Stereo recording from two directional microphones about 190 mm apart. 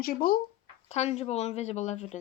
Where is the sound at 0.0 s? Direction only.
50° left (ahead or behind).